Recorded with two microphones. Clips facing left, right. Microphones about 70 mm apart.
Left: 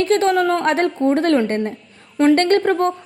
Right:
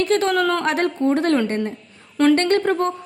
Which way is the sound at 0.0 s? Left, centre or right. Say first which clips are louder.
Left 3 dB; left.